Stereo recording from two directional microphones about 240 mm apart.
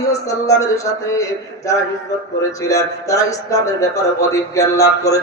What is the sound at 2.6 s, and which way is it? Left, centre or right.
Speech, centre.